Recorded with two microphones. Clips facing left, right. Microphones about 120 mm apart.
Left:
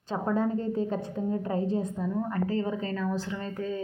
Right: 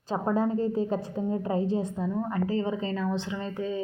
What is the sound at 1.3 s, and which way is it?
Speech, 20° right (ahead or behind).